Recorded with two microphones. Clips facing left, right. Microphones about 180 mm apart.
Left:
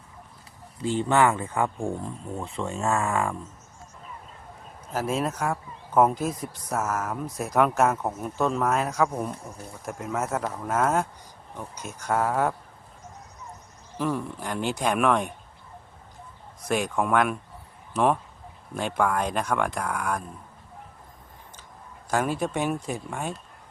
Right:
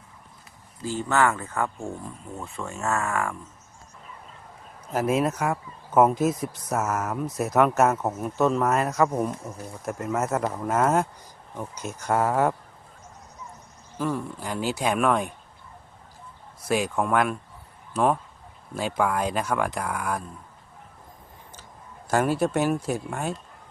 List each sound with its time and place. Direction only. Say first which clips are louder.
0.8 s speech: left 2 dB; 25° left (ahead or behind)
5.0 s speech: right 3 dB; 5° right (ahead or behind)
14.0 s speech: even; centre (ahead or behind)
16.6 s speech: right 1 dB; 5° right (ahead or behind)
22.1 s speech: right 3 dB; 5° right (ahead or behind)